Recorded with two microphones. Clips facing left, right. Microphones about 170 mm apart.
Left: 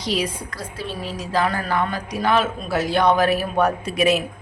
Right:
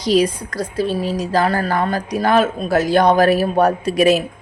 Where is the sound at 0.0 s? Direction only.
40° right (ahead or behind).